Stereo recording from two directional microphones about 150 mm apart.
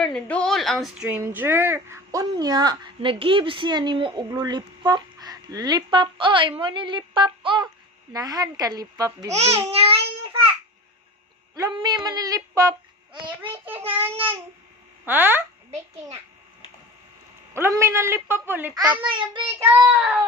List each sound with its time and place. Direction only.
0.0 s a woman's voice: 5° left (ahead or behind); by 9.7 s 20° right (ahead or behind)
9.7 s a child's voice: 40° right (ahead or behind)
11.7 s speech: 30° right (ahead or behind)
15.0 s a woman's voice: 15° right (ahead or behind)
17.5 s a woman's voice: 20° right (ahead or behind)
19.0 s speech: 30° right (ahead or behind)
19.5 s a woman's voice: 15° right (ahead or behind)